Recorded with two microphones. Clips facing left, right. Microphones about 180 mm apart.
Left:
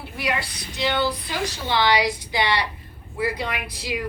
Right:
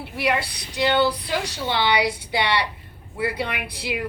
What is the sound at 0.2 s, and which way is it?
A woman's voice, 60° right (ahead or behind).